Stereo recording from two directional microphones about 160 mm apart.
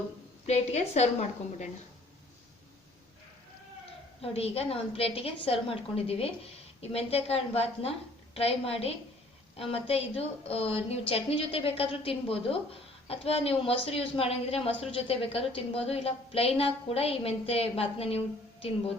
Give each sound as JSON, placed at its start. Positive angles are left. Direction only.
{"t": 0.4, "sound": "a woman's voice", "side_deg": 45}
{"t": 4.2, "sound": "a woman's voice", "side_deg": 40}